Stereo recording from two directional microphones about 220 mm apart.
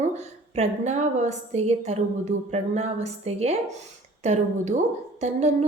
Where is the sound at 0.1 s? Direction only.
30° right (ahead or behind).